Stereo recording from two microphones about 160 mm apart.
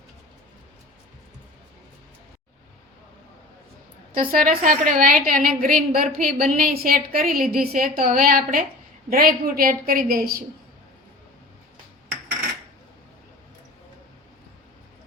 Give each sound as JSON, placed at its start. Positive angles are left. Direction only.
{"t": 4.1, "sound": "a woman's voice", "side_deg": -60}